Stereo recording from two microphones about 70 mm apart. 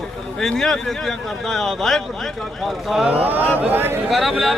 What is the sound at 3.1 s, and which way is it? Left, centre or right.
Speech, right.